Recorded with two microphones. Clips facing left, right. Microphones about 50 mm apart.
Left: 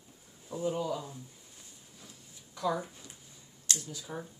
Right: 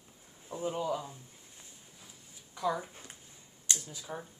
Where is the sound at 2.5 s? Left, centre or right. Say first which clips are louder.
Left 1 dB; centre.